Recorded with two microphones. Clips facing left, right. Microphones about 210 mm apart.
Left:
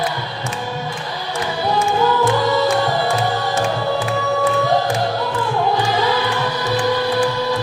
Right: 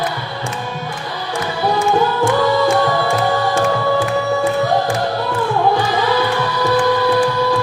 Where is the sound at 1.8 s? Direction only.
30° right (ahead or behind).